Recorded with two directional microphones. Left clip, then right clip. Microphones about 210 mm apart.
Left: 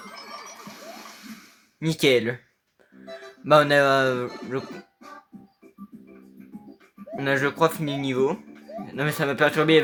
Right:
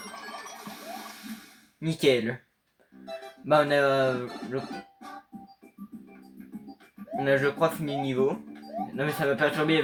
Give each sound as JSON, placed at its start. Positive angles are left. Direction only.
{"t": 1.8, "sound": "speech", "side_deg": 40}
{"t": 3.4, "sound": "speech", "side_deg": 40}
{"t": 7.2, "sound": "speech", "side_deg": 40}